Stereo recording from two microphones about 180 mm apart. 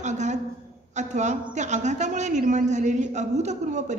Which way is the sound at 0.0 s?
40° right (ahead or behind).